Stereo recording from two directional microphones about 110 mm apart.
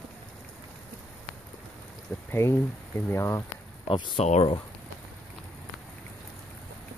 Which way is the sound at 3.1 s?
25° left (ahead or behind).